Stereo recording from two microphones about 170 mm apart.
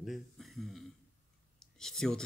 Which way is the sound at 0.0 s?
Centre (ahead or behind).